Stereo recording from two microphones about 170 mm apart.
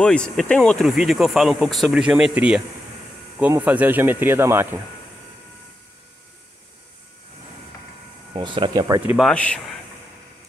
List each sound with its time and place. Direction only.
0.0 s speech: 5° left (ahead or behind); by 4.6 s 15° right (ahead or behind)
8.3 s speech: 30° right (ahead or behind)
9.0 s speech: 5° right (ahead or behind)
9.3 s speech: 5° left (ahead or behind)